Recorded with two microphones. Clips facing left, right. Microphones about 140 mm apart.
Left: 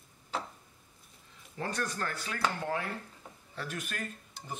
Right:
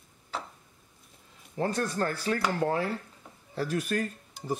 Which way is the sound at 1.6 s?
30° right (ahead or behind).